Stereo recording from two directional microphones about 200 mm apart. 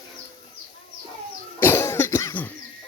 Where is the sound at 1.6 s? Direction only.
10° left (ahead or behind).